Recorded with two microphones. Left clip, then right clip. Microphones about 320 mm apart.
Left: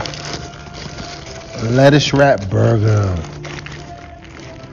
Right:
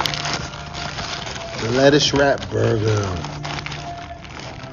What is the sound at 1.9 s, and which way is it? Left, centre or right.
Speech, centre.